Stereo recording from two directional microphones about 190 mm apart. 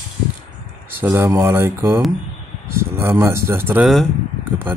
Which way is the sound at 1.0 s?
15° right (ahead or behind).